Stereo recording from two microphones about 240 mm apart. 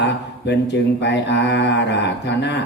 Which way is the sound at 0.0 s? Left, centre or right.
Left.